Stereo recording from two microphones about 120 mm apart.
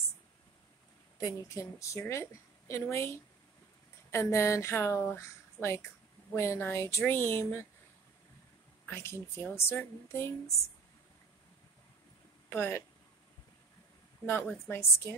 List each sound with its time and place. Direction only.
1.2 s speech: 25° left (ahead or behind)
8.8 s speech: 20° left (ahead or behind)
12.4 s speech: 20° left (ahead or behind)
14.7 s speech: 20° left (ahead or behind)